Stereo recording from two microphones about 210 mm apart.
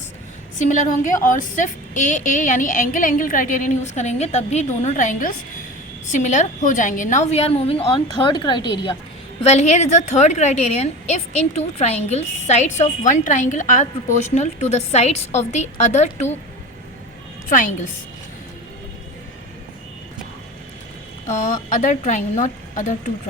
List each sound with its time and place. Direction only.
0.6 s a woman's voice: 35° left (ahead or behind)
17.5 s a woman's voice: 40° left (ahead or behind)
21.2 s a woman's voice: 35° left (ahead or behind)